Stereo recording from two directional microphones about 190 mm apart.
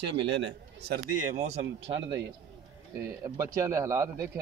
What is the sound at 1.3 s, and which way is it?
Speech, 35° right (ahead or behind).